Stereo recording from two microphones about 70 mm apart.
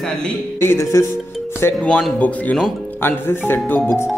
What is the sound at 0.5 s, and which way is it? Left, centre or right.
Speech, left.